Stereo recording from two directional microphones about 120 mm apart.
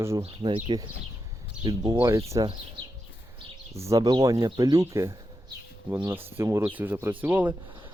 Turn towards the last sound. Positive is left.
turn(degrees=-15)  # may be behind; listen again after turning